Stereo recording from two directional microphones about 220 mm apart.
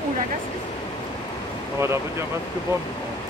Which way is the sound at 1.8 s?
10° right (ahead or behind).